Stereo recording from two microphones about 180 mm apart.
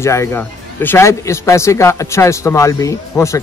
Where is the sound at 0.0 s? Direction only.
15° left (ahead or behind).